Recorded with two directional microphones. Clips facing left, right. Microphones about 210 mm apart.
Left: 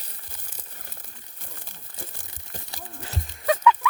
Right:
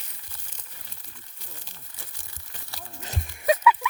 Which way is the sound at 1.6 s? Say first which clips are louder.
Left 7 dB; 55° left (ahead or behind).